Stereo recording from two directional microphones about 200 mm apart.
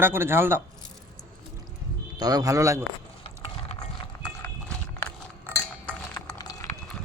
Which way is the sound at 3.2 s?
25° left (ahead or behind).